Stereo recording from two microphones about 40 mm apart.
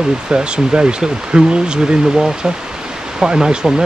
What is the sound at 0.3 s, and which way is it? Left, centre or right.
Speech, right.